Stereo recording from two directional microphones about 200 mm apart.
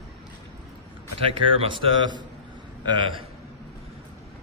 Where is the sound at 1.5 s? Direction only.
25° right (ahead or behind).